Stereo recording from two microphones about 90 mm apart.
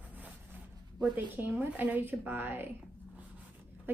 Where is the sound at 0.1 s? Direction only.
20° right (ahead or behind).